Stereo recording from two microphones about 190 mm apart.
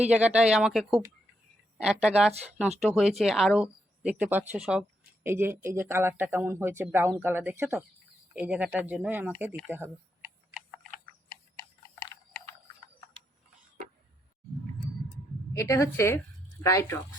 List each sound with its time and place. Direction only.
0.1 s speech: 5° right (ahead or behind)
9.6 s typing: 10° right (ahead or behind)
11.3 s clock: 15° left (ahead or behind)
15.5 s a woman's voice: 15° left (ahead or behind)